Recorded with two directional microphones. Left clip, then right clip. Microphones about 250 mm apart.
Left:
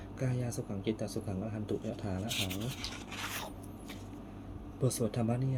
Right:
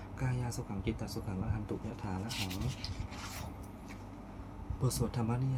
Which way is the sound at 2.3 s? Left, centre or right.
Left.